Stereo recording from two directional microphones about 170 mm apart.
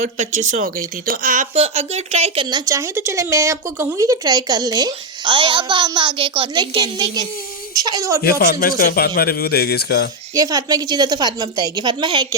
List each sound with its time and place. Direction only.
0.0 s speech: 45° right (ahead or behind)
1.5 s speech: 40° right (ahead or behind); by 8.2 s 20° right (ahead or behind)
8.2 s a man's voice: 65° left (ahead or behind)
10.3 s speech: 20° right (ahead or behind)